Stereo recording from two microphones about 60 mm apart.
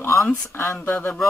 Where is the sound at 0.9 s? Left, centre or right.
Left.